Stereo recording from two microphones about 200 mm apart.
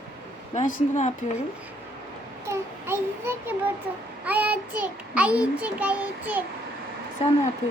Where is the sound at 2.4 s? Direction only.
15° right (ahead or behind).